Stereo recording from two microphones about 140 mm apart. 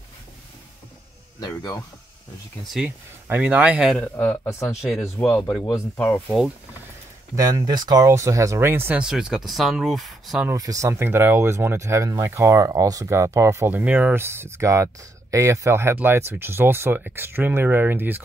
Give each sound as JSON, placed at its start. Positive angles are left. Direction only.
{"t": 1.4, "sound": "speech", "side_deg": 30}
{"t": 2.6, "sound": "speech", "side_deg": 0}
{"t": 3.9, "sound": "speech", "side_deg": 10}
{"t": 7.3, "sound": "speech", "side_deg": -25}
{"t": 10.5, "sound": "speech", "side_deg": -25}